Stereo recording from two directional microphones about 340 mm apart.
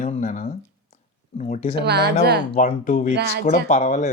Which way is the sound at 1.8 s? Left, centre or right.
Right.